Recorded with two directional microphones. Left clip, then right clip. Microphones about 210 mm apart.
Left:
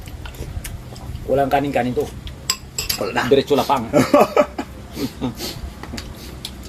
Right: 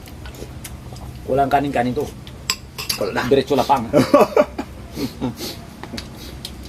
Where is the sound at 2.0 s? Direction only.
5° left (ahead or behind).